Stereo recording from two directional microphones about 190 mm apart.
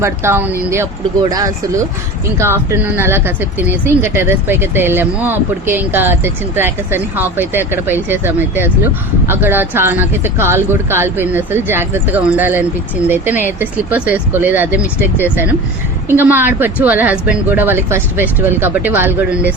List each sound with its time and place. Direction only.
0.0 s speech: 15° right (ahead or behind)
16.0 s speech: 10° right (ahead or behind)